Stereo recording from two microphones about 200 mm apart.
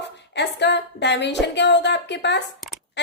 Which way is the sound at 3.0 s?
60° left (ahead or behind).